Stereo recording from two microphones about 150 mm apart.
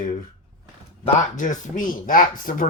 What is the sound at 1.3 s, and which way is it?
Speech, 55° left (ahead or behind).